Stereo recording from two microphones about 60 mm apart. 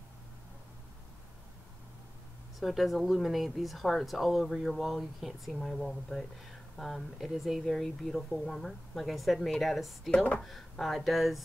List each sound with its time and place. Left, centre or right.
2.6 s speech: centre
10.1 s speech: left
10.4 s speech: centre